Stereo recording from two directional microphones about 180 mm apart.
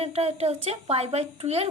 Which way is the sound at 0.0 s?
35° right (ahead or behind).